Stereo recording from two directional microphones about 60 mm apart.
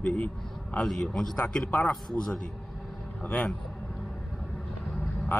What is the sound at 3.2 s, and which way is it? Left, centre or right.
Speech, left.